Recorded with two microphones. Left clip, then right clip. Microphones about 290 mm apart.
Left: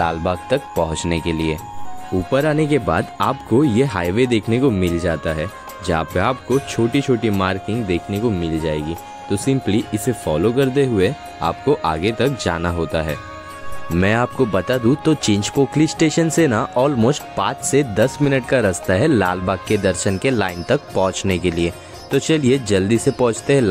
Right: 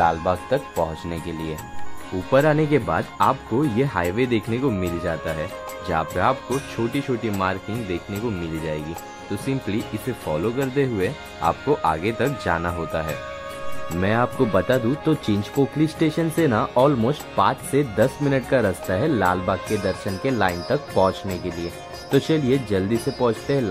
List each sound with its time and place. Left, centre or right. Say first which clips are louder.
0.0 s speech: even; left
9.3 s speech: left 7 dB; left